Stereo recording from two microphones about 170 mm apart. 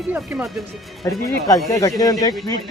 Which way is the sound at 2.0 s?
20° left (ahead or behind).